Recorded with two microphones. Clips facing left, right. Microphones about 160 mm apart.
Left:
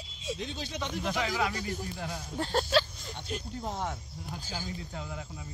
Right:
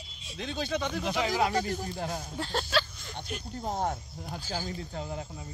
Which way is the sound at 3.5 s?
45° right (ahead or behind).